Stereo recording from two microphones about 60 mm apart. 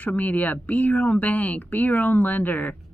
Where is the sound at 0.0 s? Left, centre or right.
Left.